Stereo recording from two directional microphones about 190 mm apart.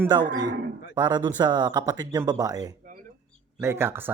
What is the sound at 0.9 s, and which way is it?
Speech, 20° right (ahead or behind).